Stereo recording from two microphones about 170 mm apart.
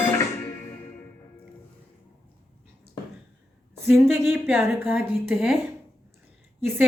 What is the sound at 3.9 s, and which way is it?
A woman's voice, 15° right (ahead or behind).